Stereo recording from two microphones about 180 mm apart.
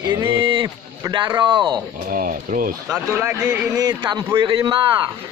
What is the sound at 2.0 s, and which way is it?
Speech, 50° right (ahead or behind).